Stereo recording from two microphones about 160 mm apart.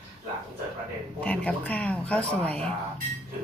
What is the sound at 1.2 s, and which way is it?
A woman's voice, 10° left (ahead or behind).